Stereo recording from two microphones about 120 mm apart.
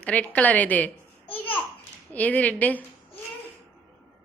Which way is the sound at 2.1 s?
15° left (ahead or behind).